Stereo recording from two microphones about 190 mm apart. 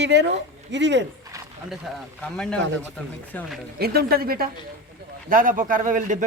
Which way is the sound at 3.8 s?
55° right (ahead or behind).